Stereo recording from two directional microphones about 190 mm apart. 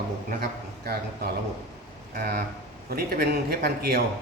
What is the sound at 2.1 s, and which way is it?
Speech, 55° right (ahead or behind).